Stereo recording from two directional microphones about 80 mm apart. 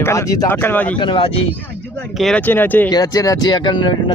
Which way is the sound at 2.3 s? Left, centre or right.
Left.